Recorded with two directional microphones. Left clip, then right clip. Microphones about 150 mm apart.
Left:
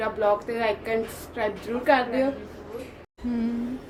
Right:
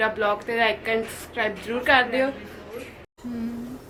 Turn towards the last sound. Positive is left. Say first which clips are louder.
# left 4 dB
turn(degrees=30)  # may be behind; listen again after turning